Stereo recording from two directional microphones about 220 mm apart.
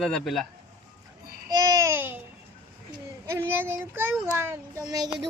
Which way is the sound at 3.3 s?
10° right (ahead or behind).